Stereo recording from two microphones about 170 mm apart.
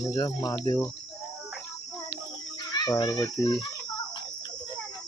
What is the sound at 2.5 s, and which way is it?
Cricket, 25° left (ahead or behind).